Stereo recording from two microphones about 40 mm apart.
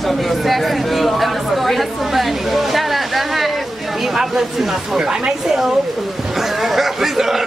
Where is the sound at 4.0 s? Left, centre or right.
Centre.